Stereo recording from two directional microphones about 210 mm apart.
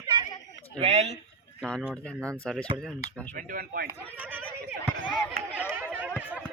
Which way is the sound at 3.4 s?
45° right (ahead or behind).